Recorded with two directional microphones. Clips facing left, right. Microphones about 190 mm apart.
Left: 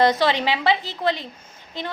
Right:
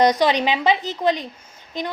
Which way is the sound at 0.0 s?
15° right (ahead or behind).